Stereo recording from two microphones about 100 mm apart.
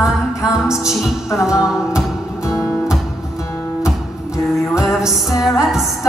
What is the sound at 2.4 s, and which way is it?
Music, 30° left (ahead or behind).